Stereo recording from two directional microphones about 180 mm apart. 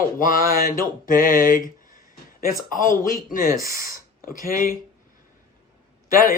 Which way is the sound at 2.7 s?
50° left (ahead or behind).